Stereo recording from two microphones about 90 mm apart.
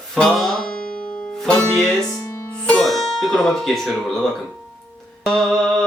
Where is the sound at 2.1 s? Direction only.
35° left (ahead or behind).